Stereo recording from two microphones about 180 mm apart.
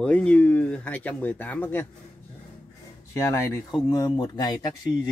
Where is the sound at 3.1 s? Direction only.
15° left (ahead or behind).